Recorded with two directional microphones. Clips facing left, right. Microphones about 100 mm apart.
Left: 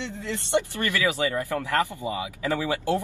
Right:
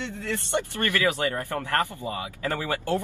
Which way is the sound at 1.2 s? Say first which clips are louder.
Left 2 dB; 50° right (ahead or behind).